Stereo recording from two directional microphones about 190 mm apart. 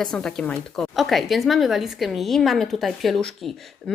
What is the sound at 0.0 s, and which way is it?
A woman's voice, 5° left (ahead or behind).